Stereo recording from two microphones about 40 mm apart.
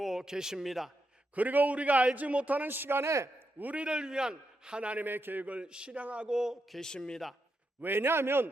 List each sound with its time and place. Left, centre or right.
0.0 s a man's voice: centre
1.4 s a man's voice: right
2.6 s a man's voice: right
3.6 s a man's voice: right
3.8 s a man's voice: right
4.9 s a man's voice: right
5.5 s a man's voice: right
6.0 s a man's voice: right
6.2 s a man's voice: centre
6.7 s a man's voice: centre
7.8 s a man's voice: right